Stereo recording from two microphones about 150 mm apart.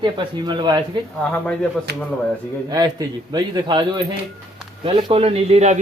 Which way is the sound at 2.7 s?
25° right (ahead or behind).